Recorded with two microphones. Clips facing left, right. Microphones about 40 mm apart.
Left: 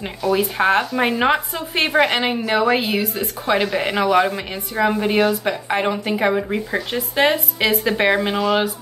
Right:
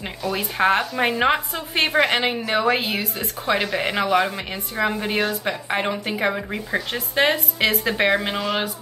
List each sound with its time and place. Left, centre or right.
0.2 s a woman's voice: centre